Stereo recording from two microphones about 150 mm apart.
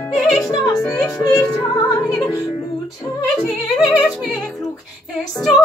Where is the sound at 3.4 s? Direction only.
5° left (ahead or behind).